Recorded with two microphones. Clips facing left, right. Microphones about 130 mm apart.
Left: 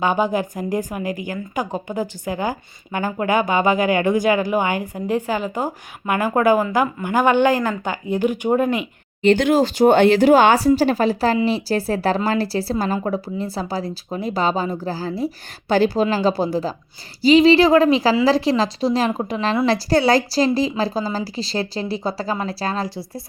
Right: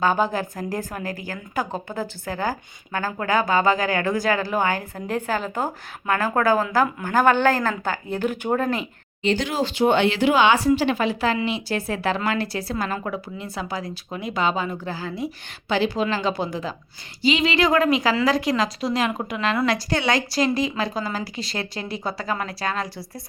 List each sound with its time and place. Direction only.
0.0 s a woman's voice: 15° left (ahead or behind)
9.2 s a woman's voice: 55° left (ahead or behind); by 23.0 s 30° left (ahead or behind)